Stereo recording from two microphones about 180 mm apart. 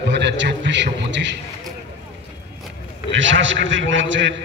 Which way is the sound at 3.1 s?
90° right.